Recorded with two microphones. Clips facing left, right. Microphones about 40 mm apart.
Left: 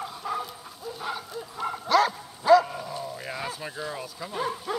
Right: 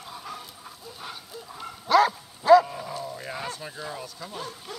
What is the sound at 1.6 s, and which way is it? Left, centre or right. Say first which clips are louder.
Bow-wow: left 12 dB; left.